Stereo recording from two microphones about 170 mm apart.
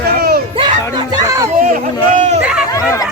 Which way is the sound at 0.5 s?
25° right (ahead or behind).